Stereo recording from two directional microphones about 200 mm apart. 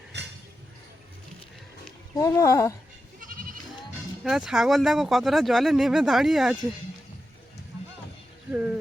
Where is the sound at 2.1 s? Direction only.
15° left (ahead or behind).